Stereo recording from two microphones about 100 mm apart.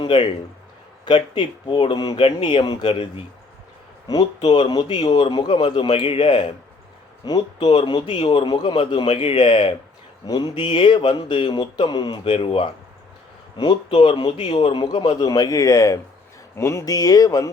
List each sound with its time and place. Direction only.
0.0 s a man's voice: 50° left (ahead or behind)
2.9 s speech: 75° left (ahead or behind)
4.1 s speech: 40° left (ahead or behind)
5.6 s a man's voice: 60° left (ahead or behind)
7.3 s a man's voice: 45° left (ahead or behind)
10.2 s speech: 40° left (ahead or behind)
10.6 s speech: 55° left (ahead or behind)
13.6 s a man's voice: 55° left (ahead or behind)
15.1 s speech: 40° left (ahead or behind)